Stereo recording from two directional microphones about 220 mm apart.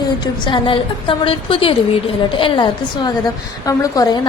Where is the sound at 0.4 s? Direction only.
25° left (ahead or behind).